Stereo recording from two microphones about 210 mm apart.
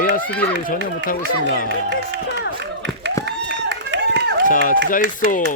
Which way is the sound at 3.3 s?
55° right (ahead or behind).